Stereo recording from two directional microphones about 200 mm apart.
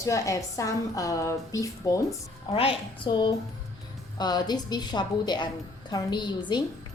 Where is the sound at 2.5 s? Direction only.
30° left (ahead or behind).